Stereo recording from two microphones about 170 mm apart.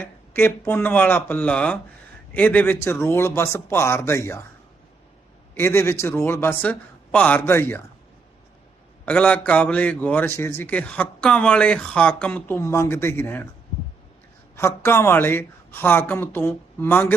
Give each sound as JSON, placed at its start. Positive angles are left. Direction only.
{"t": 0.0, "sound": "a man's voice", "side_deg": 10}
{"t": 5.5, "sound": "a man's voice", "side_deg": 15}
{"t": 9.0, "sound": "a man's voice", "side_deg": 10}
{"t": 14.5, "sound": "a man's voice", "side_deg": 15}